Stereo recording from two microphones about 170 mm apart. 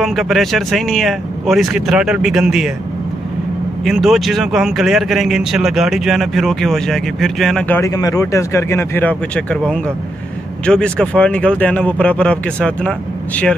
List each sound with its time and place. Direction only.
0.0 s speech: centre (ahead or behind)
3.8 s speech: centre (ahead or behind)